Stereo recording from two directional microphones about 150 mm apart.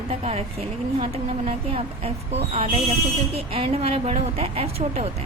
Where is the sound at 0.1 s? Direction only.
45° right (ahead or behind).